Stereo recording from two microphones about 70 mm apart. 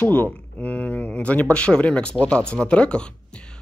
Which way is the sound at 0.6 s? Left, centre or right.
Centre.